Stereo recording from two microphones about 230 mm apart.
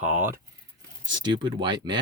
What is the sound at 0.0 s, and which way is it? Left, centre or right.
Speech, centre.